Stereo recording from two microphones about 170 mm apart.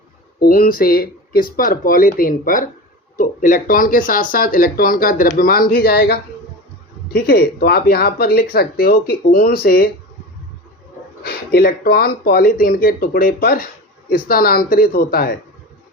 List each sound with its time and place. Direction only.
0.3 s speech: 60° left (ahead or behind)
11.2 s speech: 60° left (ahead or behind)